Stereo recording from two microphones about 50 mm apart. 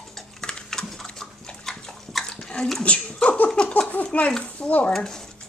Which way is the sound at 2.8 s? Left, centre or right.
Left.